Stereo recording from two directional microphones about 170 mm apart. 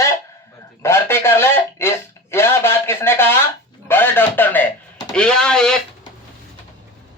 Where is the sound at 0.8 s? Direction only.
15° left (ahead or behind).